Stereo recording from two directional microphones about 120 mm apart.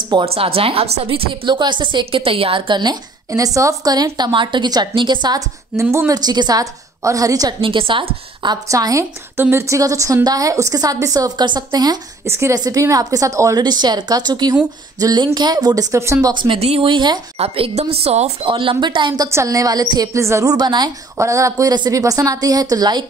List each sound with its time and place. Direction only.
0.2 s a woman's voice: 55° right (ahead or behind)
5.8 s a woman's voice: 25° right (ahead or behind)
7.6 s a woman's voice: 45° right (ahead or behind)
8.6 s a woman's voice: 25° right (ahead or behind)
12.3 s a woman's voice: 20° right (ahead or behind)
12.5 s a woman's voice: 35° right (ahead or behind)
16.3 s a woman's voice: 40° right (ahead or behind)
16.5 s a woman's voice: 55° right (ahead or behind); by 17.2 s 40° right (ahead or behind)
17.4 s a woman's voice: 55° right (ahead or behind)
19.2 s a woman's voice: 25° right (ahead or behind)
21.2 s a woman's voice: 25° right (ahead or behind)